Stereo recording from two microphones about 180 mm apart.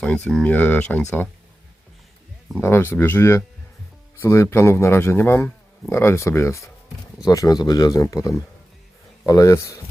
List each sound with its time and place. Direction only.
0.0 s speech: 5° left (ahead or behind)
2.6 s speech: 15° left (ahead or behind)